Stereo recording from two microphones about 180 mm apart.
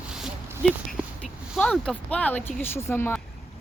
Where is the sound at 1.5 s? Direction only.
5° left (ahead or behind).